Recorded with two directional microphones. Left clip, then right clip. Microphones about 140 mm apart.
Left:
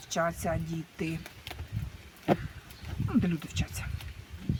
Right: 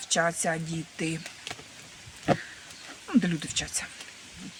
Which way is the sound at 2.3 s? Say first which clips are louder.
Right 2 dB; 60° right (ahead or behind).